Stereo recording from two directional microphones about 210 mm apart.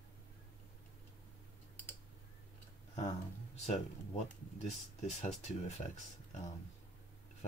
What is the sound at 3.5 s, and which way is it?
Music, 30° left (ahead or behind).